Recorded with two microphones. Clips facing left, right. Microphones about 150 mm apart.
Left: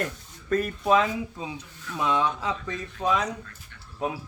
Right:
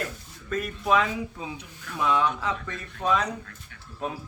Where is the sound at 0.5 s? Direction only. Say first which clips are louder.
Left 2 dB; 30° left (ahead or behind).